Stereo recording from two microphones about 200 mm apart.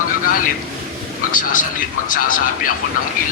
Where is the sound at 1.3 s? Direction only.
40° left (ahead or behind).